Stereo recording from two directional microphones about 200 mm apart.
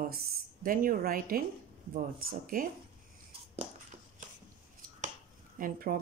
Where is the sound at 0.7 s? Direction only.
45° right (ahead or behind).